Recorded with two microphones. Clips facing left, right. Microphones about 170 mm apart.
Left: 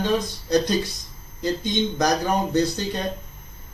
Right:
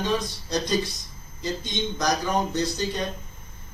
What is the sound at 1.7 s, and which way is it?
A man's voice, 60° left (ahead or behind).